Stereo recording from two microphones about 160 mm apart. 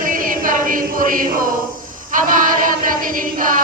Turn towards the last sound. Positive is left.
turn(degrees=-60)  # may be behind; listen again after turning